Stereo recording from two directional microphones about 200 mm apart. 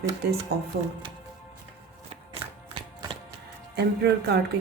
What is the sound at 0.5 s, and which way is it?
Speech, 50° right (ahead or behind).